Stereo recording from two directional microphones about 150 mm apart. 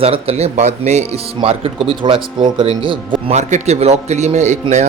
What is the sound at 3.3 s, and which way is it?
A man's voice, 50° right (ahead or behind).